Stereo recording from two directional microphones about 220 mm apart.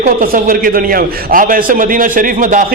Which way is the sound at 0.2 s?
40° right (ahead or behind).